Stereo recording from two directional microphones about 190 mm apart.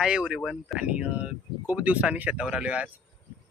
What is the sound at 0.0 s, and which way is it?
Speech, 5° right (ahead or behind).